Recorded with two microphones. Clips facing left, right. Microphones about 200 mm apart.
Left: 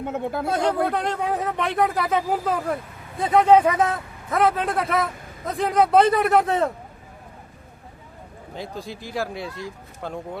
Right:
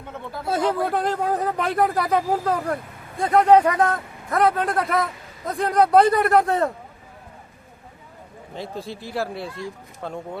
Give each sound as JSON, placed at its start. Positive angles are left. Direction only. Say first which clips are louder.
{"t": 0.0, "sound": "speech", "louder": "left 8 dB", "side_deg": 50}
{"t": 0.4, "sound": "speech", "louder": "right 2 dB", "side_deg": -5}
{"t": 8.5, "sound": "speech", "louder": "right 1 dB", "side_deg": 0}